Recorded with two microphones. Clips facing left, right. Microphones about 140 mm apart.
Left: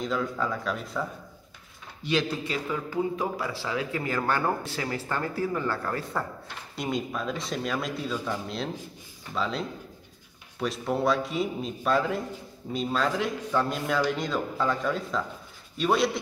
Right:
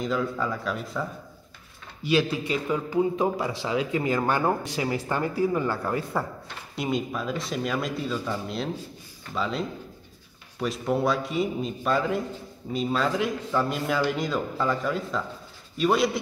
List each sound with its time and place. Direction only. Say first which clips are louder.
0.0 s a man's voice: right 2 dB; centre (ahead or behind)
2.0 s a man's voice: right 4 dB; 5° right (ahead or behind)
6.7 s a man's voice: right 2 dB; centre (ahead or behind)